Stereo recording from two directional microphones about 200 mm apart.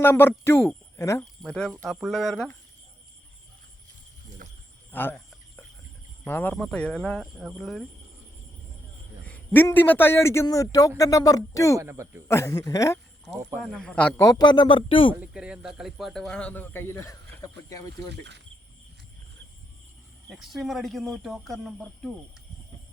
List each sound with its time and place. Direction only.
0.0 s speech: 10° left (ahead or behind)
1.4 s speech: 5° left (ahead or behind)
4.4 s a sound: 45° right (ahead or behind)
4.9 s speech: 10° left (ahead or behind)
6.2 s speech: 10° left (ahead or behind)
9.2 s a man's voice: 10° left (ahead or behind)
11.8 s speech: 15° right (ahead or behind)
12.3 s a man's voice: 15° left (ahead or behind)
13.6 s a man's voice: 5° left (ahead or behind); by 15.1 s 25° left (ahead or behind)
15.2 s speech: 5° right (ahead or behind); by 17.8 s 15° left (ahead or behind)
18.1 s speech: 60° right (ahead or behind)
20.2 s speech: centre (ahead or behind)